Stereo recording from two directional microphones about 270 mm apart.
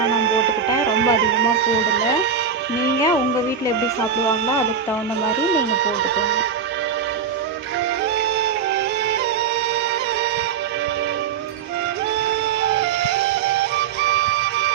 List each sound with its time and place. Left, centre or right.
0.1 s music: right
5.5 s speech: right
12.6 s music: right